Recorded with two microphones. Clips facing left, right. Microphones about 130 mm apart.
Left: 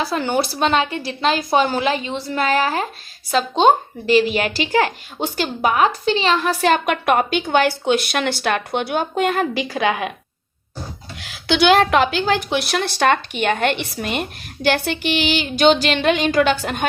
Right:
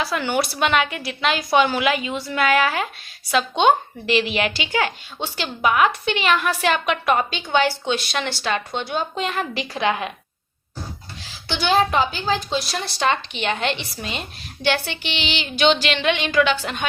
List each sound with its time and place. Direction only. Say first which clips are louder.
0.1 s a woman's voice: left 2 dB; 30° left (ahead or behind)
11.2 s speech: left 9 dB; 70° left (ahead or behind); by 16.8 s 50° left (ahead or behind)